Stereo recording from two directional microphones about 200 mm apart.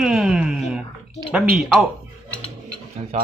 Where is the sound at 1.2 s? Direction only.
5° right (ahead or behind).